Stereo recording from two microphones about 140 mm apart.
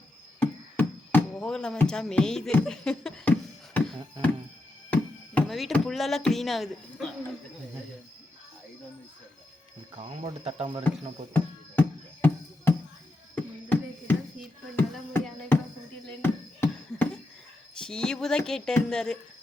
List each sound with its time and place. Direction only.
0.3 s a sound: 10° left (ahead or behind)
2.6 s speech: 5° left (ahead or behind)
4.9 s music: 10° left (ahead or behind)
5.7 s speech: centre (ahead or behind)
10.0 s speech: 45° right (ahead or behind)
11.3 s music: 15° left (ahead or behind)
13.3 s a sound: 10° left (ahead or behind)
17.7 s speech: 5° left (ahead or behind)